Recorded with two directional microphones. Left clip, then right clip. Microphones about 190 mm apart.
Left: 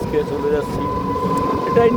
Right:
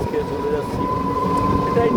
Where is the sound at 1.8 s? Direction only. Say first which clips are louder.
Left 6 dB; 35° left (ahead or behind).